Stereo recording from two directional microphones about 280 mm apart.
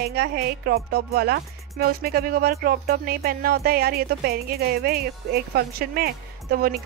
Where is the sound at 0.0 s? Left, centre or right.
Right.